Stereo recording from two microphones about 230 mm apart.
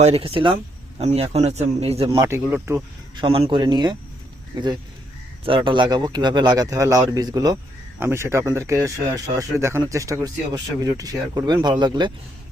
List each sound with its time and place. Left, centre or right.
0.0 s speech: right
2.1 s speech: centre
3.2 s speech: right